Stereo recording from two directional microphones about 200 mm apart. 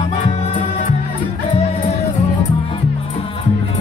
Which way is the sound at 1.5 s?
30° left (ahead or behind).